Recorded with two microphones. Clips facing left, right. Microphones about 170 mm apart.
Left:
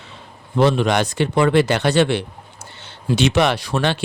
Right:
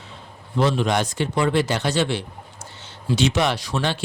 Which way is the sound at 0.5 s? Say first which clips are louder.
Left 4 dB; 65° left (ahead or behind).